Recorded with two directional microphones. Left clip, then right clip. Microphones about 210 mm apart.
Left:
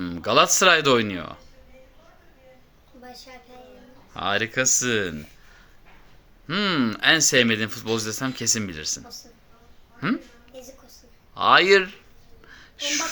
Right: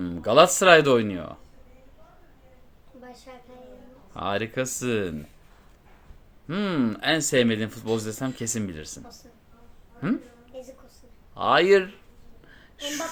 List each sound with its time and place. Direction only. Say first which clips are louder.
0.0 s speech: right 2 dB; 10° right (ahead or behind)
4.1 s speech: left 4 dB; 10° right (ahead or behind)
6.5 s speech: left 4 dB; 5° right (ahead or behind)
10.0 s speech: left 2 dB; 10° right (ahead or behind)
11.3 s speech: left 3 dB; 5° right (ahead or behind)
12.5 s a sound: left 6 dB; 15° right (ahead or behind)